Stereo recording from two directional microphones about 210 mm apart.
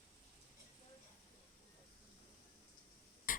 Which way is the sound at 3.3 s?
40° left (ahead or behind).